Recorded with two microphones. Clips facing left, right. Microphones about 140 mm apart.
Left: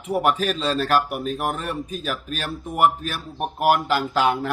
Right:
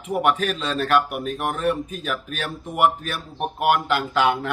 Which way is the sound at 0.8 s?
Centre (ahead or behind).